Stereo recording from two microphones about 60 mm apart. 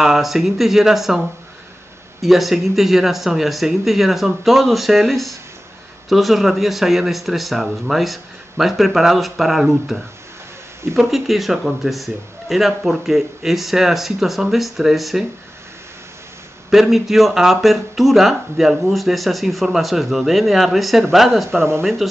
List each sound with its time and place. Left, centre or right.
0.0 s speech: centre
2.2 s speech: centre
16.7 s speech: centre
21.5 s speech: right